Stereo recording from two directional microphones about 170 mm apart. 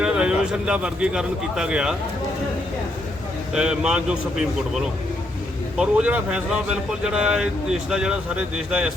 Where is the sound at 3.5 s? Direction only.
5° right (ahead or behind).